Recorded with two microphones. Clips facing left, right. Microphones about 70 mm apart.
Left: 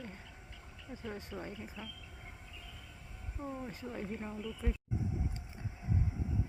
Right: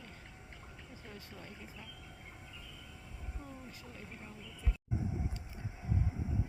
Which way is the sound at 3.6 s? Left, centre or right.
Left.